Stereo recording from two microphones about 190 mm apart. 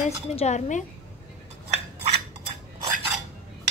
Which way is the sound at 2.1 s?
30° right (ahead or behind).